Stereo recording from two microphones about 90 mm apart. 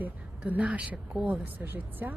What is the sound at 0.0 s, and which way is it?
A woman's voice, 20° right (ahead or behind).